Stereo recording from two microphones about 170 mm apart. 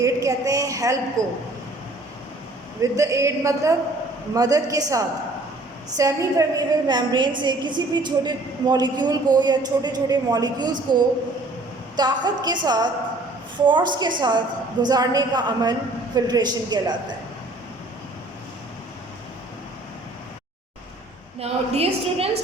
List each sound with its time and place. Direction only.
0.0 s a woman's voice: 20° right (ahead or behind)
1.2 s a man's voice: 45° right (ahead or behind)
2.8 s a woman's voice: 20° right (ahead or behind)
21.3 s a woman's voice: 35° right (ahead or behind)